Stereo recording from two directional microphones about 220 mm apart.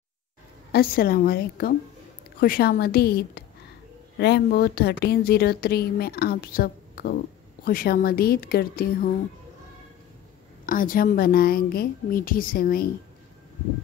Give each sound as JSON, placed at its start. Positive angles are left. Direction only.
{"t": 0.7, "sound": "speech", "side_deg": 45}
{"t": 10.6, "sound": "a woman's voice", "side_deg": 40}